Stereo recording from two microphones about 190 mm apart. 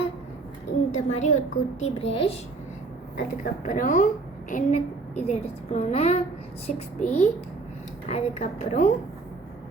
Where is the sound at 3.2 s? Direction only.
45° left (ahead or behind).